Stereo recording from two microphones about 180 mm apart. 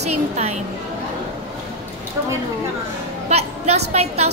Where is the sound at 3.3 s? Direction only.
35° right (ahead or behind).